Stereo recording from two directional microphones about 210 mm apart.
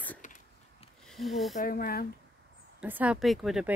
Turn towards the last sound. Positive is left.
turn(degrees=0)  # may be behind; listen again after turning